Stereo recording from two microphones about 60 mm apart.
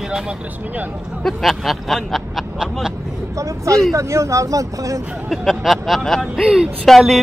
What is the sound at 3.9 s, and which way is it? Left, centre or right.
Speech, right.